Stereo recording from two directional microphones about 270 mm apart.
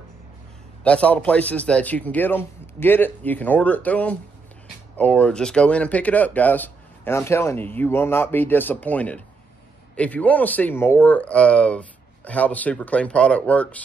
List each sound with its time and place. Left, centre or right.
0.8 s speech: centre